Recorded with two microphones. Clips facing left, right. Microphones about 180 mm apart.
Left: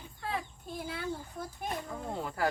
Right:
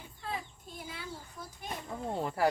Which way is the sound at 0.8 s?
55° left (ahead or behind).